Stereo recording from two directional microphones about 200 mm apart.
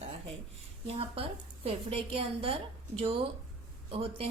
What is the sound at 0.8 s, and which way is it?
Speech, 30° right (ahead or behind).